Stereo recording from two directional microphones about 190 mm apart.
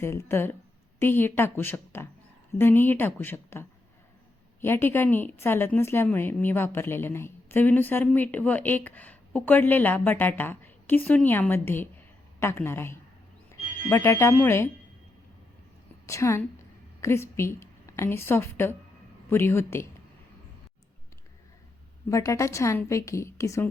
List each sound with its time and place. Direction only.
0.0 s a woman's voice: 15° left (ahead or behind)
16.0 s a woman's voice: 15° left (ahead or behind)
22.1 s a woman's voice: 15° left (ahead or behind)